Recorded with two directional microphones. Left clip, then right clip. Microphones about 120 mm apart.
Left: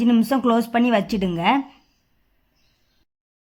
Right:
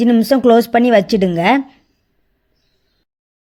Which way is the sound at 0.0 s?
30° right (ahead or behind).